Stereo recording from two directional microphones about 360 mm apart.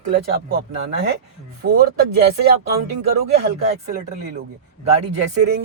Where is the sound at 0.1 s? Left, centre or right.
Right.